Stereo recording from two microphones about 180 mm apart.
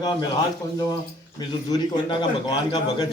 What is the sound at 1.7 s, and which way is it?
A man's voice, 25° left (ahead or behind).